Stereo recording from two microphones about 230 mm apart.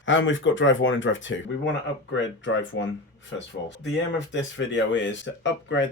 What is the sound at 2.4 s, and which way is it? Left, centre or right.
Speech, left.